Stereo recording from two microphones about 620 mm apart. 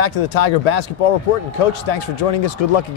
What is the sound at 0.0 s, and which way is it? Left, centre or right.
Speech, left.